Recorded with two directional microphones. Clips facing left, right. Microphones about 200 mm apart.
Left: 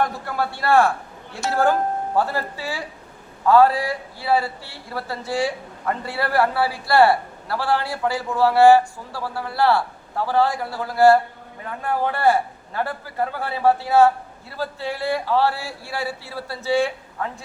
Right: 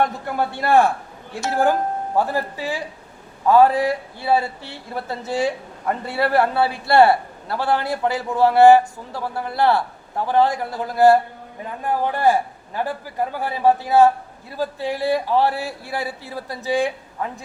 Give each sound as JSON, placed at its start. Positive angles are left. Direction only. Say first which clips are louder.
{"t": 0.0, "sound": "speech", "louder": "right 2 dB", "side_deg": -20}